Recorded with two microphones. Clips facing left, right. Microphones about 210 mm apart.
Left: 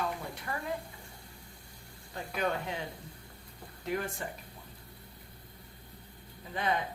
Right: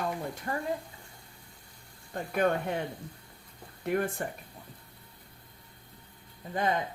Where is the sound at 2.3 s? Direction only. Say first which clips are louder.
Right 6 dB; 55° right (ahead or behind).